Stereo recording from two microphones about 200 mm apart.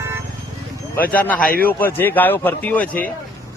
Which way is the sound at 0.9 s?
10° left (ahead or behind).